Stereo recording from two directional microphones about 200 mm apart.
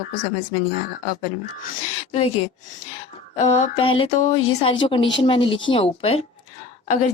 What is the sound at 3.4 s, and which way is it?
A woman's voice, 30° left (ahead or behind).